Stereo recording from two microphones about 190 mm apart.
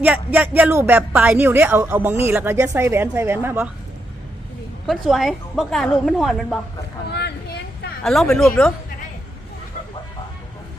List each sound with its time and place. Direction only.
0.0 s speech: 10° right (ahead or behind)
4.9 s a woman's voice: centre (ahead or behind)
7.1 s a sound: 60° left (ahead or behind)
8.0 s a woman's voice: centre (ahead or behind)